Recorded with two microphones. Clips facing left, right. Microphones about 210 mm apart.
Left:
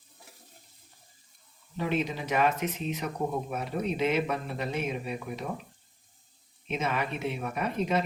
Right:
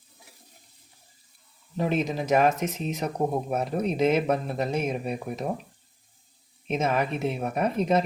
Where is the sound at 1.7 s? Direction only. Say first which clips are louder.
Right 4 dB; 40° right (ahead or behind).